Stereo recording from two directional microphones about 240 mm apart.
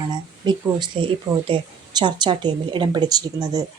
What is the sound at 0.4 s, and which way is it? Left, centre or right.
Speech, centre.